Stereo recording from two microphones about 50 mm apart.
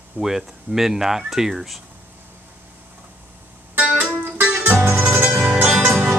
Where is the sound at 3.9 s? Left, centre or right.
Right.